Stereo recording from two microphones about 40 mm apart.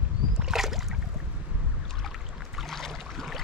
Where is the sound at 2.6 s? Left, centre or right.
Centre.